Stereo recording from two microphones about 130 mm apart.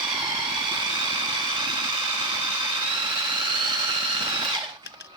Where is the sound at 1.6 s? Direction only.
35° right (ahead or behind).